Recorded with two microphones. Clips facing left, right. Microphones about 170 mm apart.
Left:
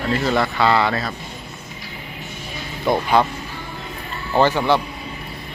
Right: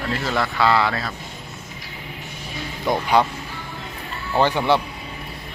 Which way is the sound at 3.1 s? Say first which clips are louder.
Even; 15° right (ahead or behind).